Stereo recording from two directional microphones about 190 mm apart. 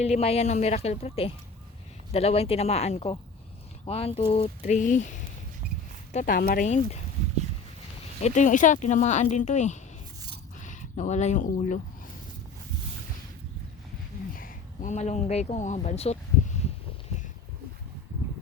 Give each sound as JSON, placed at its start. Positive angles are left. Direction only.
{"t": 0.0, "sound": "speech", "side_deg": 35}
{"t": 6.1, "sound": "speech", "side_deg": 50}
{"t": 6.7, "sound": "speech", "side_deg": 35}
{"t": 8.2, "sound": "speech", "side_deg": 40}
{"t": 14.3, "sound": "speech", "side_deg": 45}